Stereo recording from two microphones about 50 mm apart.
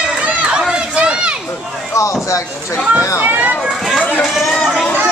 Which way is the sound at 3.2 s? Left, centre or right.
Right.